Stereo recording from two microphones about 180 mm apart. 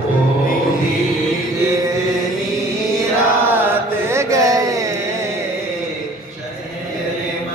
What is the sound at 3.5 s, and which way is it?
Mantra, 15° right (ahead or behind).